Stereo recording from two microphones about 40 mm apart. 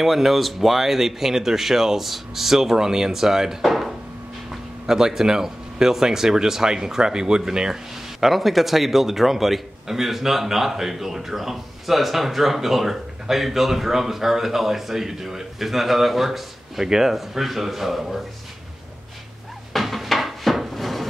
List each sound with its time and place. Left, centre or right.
0.0 s speech: centre
4.5 s speech: centre
8.2 s a man's voice: centre
19.7 s dishes: centre